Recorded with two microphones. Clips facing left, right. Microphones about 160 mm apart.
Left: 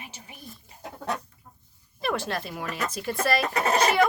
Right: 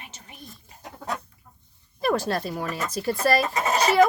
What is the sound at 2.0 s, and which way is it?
Speech, 40° right (ahead or behind).